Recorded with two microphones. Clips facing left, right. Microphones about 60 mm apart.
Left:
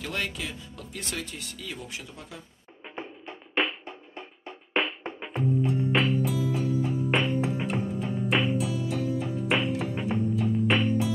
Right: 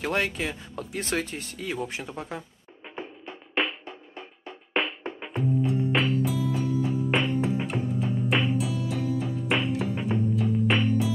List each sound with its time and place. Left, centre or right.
0.0 s speech: right
3.6 s drum: centre
4.8 s music: centre